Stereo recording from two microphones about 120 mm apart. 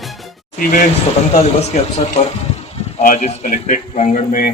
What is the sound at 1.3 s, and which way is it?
Speech, 65° left (ahead or behind).